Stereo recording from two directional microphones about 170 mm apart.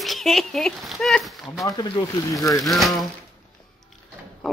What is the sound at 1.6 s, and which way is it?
Speech, 25° left (ahead or behind).